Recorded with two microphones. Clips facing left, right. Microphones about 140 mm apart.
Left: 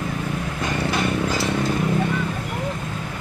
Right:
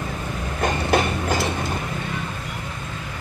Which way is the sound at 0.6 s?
55° right (ahead or behind).